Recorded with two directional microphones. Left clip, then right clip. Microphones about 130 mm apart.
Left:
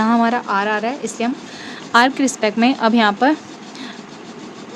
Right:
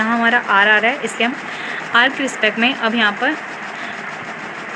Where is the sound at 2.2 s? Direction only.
90° left.